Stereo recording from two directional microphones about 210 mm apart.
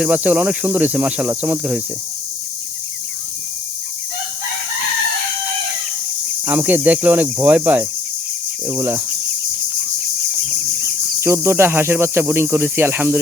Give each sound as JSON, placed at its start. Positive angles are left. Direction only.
{"t": 0.0, "sound": "speech", "side_deg": -5}
{"t": 6.4, "sound": "speech", "side_deg": -10}
{"t": 11.2, "sound": "speech", "side_deg": -10}